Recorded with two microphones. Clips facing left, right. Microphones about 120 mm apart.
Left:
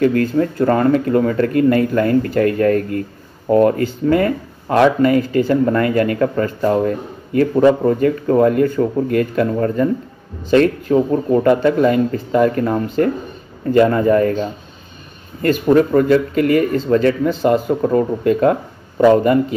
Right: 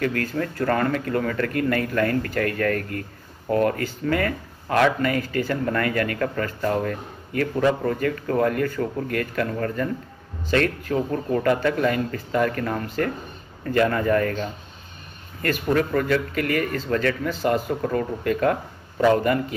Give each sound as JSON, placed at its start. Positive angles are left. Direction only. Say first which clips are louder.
{"t": 0.0, "sound": "speech", "louder": "left 10 dB", "side_deg": 25}